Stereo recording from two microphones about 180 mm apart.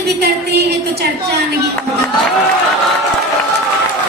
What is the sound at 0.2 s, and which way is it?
Speech, 65° right (ahead or behind).